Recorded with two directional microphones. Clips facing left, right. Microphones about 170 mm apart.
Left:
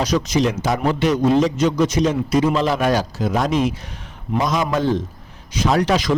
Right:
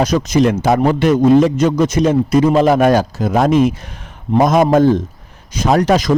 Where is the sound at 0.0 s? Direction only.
50° right (ahead or behind).